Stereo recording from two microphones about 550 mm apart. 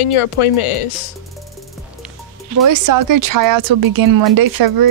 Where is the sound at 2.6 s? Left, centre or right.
Right.